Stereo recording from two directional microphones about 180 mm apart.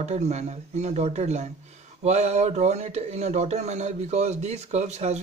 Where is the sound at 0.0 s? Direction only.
40° right (ahead or behind).